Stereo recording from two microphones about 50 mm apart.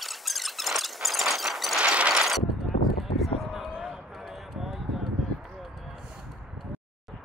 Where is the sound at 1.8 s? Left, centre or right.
Right.